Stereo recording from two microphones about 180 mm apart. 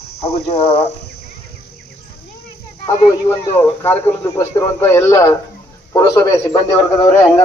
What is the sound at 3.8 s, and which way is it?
A man's voice, 15° left (ahead or behind).